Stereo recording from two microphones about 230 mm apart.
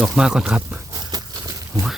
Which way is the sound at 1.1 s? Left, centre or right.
Centre.